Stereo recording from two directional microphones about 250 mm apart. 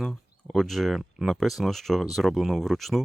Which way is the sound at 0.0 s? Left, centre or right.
Centre.